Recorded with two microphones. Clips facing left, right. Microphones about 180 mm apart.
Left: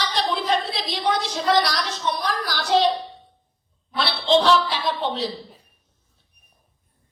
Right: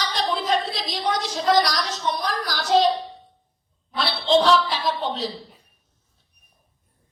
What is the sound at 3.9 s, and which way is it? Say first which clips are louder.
A man's voice: even; 40° right (ahead or behind).